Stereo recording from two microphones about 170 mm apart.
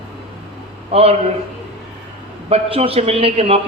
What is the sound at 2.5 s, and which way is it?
A man's voice, 35° right (ahead or behind).